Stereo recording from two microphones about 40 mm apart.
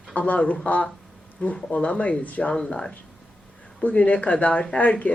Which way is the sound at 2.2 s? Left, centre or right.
Left.